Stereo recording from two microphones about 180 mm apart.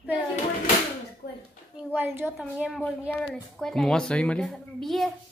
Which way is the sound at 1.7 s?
10° right (ahead or behind).